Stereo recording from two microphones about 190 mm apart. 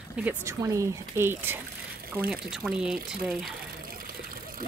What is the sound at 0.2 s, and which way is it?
Speech, 10° right (ahead or behind).